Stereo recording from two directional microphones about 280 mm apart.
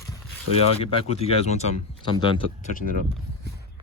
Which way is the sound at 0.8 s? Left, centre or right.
Left.